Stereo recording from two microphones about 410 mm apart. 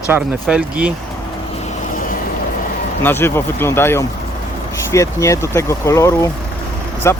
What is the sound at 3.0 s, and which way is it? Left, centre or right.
Speech, centre.